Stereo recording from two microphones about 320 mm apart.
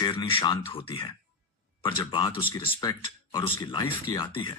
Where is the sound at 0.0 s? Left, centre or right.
Centre.